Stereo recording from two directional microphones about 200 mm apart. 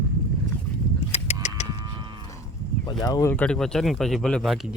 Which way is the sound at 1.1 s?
35° left (ahead or behind).